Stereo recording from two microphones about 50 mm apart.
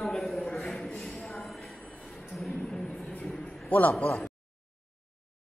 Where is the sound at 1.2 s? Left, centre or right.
Centre.